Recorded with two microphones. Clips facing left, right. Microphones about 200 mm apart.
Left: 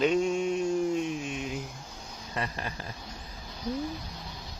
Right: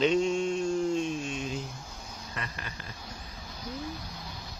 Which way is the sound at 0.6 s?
10° left (ahead or behind).